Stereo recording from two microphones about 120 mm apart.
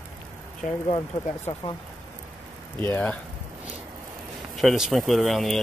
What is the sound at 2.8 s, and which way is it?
Speech, 15° left (ahead or behind).